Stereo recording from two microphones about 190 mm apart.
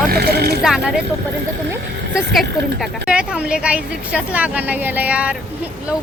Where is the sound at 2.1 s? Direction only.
Centre (ahead or behind).